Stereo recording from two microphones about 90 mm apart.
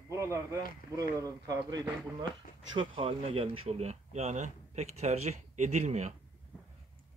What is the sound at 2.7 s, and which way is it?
Speech, 80° right.